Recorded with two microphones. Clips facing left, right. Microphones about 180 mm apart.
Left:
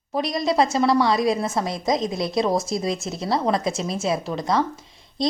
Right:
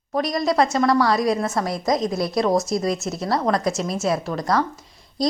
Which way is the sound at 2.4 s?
Centre (ahead or behind).